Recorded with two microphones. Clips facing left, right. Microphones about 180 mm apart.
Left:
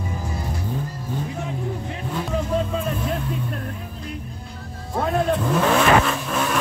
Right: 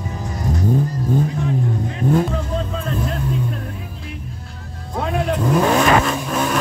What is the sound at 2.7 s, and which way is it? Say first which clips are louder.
Vehicle: right 1 dB; 10° left (ahead or behind).